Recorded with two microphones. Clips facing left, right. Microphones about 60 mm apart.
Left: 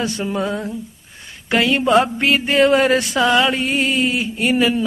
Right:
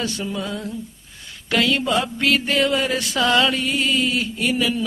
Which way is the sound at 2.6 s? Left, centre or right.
Left.